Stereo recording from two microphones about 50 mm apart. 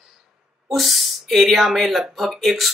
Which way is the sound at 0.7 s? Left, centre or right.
Centre.